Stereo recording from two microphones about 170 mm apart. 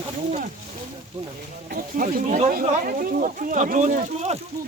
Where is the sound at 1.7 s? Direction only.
55° right (ahead or behind).